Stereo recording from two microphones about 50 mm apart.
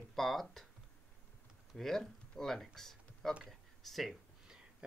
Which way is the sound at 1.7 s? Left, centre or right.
Centre.